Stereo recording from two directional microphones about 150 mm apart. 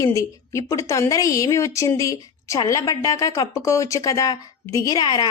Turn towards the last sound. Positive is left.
turn(degrees=25)  # may be behind; listen again after turning